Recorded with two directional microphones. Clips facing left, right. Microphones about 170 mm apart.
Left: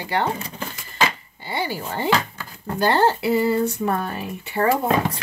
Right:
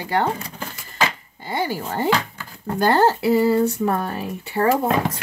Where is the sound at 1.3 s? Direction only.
45° right (ahead or behind).